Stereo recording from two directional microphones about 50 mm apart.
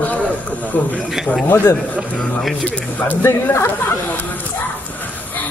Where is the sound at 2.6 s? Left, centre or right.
Left.